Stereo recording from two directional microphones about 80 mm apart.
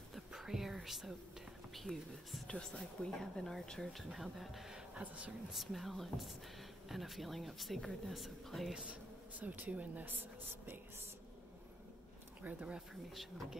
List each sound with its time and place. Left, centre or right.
0.1 s a sound: centre
1.7 s speech: centre
5.5 s speech: centre
9.4 s speech: centre
12.4 s speech: centre
13.1 s speech: centre